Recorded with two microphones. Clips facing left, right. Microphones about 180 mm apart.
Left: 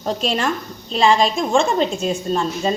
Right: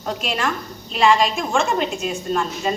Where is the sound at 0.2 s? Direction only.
30° left (ahead or behind).